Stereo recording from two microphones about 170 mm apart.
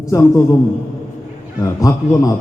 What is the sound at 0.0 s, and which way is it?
Speech, 20° left (ahead or behind).